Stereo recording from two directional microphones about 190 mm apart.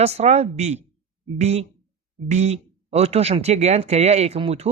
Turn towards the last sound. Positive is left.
turn(degrees=-30)  # may be behind; listen again after turning